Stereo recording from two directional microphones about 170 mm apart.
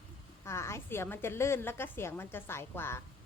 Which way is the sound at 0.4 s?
15° left (ahead or behind).